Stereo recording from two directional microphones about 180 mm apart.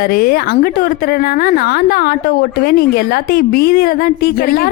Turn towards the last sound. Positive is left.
turn(degrees=55)  # may be behind; listen again after turning